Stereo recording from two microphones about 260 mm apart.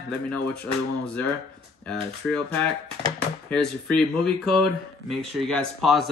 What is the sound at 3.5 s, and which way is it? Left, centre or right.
Speech, centre.